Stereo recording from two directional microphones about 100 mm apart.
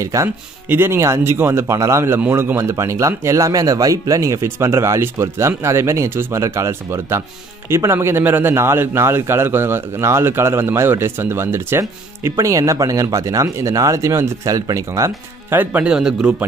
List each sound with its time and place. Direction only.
0.0 s a man's voice: 35° right (ahead or behind)
15.5 s speech: 15° right (ahead or behind)